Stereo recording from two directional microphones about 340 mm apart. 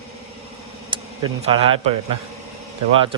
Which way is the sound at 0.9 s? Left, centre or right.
Centre.